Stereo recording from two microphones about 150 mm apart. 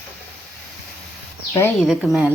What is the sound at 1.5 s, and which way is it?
Speech, 15° left (ahead or behind).